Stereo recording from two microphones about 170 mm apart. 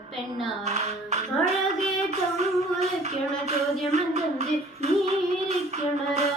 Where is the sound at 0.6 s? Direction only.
40° right (ahead or behind).